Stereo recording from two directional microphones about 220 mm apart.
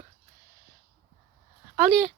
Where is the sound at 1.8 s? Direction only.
Centre (ahead or behind).